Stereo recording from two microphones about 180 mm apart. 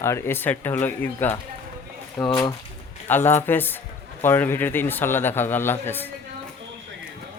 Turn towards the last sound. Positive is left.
turn(degrees=10)  # may be behind; listen again after turning